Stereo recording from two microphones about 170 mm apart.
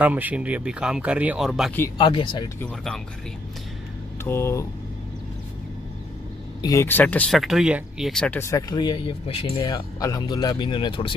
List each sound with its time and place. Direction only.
0.0 s speech: 10° right (ahead or behind)
2.0 s speech: 30° left (ahead or behind)
2.6 s speech: 5° left (ahead or behind)
4.2 s speech: 15° left (ahead or behind)
6.6 s speech: 20° left (ahead or behind); by 9.5 s 35° left (ahead or behind)
9.6 s speech: 20° left (ahead or behind)